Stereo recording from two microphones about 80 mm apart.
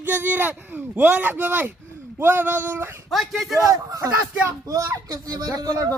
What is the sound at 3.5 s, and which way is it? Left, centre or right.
Speech, right.